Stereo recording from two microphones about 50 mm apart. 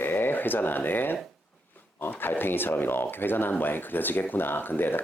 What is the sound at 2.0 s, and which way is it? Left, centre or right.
Speech, left.